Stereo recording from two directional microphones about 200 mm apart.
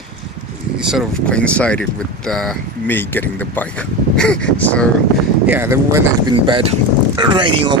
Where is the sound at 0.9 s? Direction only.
Centre (ahead or behind).